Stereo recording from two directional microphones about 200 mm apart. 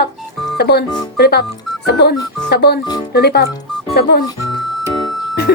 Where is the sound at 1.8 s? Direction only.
55° left (ahead or behind).